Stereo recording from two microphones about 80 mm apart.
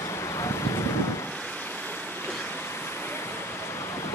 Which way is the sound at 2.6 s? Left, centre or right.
Left.